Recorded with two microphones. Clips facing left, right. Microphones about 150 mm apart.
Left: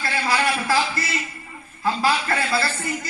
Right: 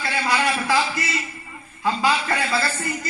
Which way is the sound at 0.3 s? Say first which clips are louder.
Even; 20° right (ahead or behind).